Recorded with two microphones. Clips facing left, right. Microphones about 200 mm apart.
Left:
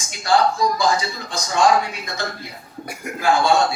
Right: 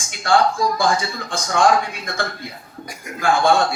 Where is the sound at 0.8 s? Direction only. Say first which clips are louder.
Even; 50° right (ahead or behind).